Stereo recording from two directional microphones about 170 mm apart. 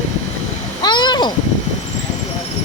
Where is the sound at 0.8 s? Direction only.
25° left (ahead or behind).